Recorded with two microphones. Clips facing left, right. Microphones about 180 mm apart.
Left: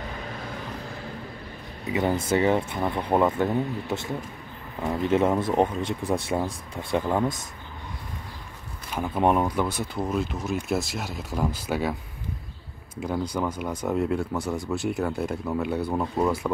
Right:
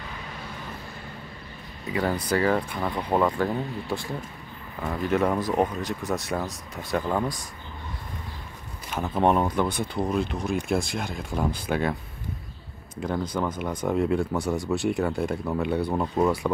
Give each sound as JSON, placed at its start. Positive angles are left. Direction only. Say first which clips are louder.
{"t": 1.9, "sound": "speech", "louder": "left 2 dB", "side_deg": 20}
{"t": 9.0, "sound": "speech", "louder": "even", "side_deg": 10}